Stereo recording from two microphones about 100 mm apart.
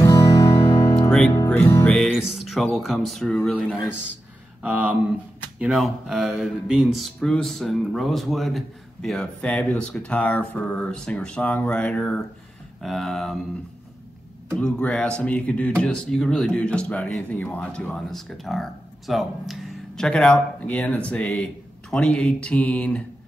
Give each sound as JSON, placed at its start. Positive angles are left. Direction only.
{"t": 0.0, "sound": "music", "side_deg": 35}
{"t": 2.0, "sound": "speech", "side_deg": -5}
{"t": 4.6, "sound": "speech", "side_deg": -10}
{"t": 14.5, "sound": "speech", "side_deg": 10}